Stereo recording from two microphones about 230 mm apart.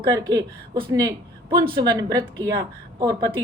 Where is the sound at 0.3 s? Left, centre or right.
Centre.